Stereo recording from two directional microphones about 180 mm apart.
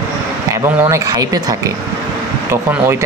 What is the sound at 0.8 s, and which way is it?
Speech, 15° right (ahead or behind).